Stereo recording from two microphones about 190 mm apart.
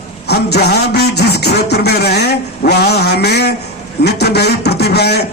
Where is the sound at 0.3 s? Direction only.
60° left (ahead or behind).